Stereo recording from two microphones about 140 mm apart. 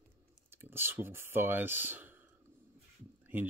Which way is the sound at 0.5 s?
15° right (ahead or behind).